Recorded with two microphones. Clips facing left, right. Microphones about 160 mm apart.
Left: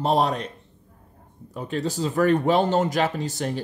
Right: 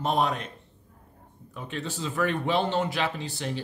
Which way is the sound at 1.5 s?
40° left (ahead or behind).